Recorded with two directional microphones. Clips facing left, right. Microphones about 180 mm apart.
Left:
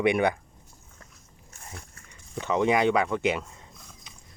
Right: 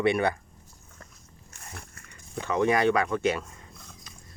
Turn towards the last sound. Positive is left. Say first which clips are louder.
# even
turn(degrees=15)  # may be behind; listen again after turning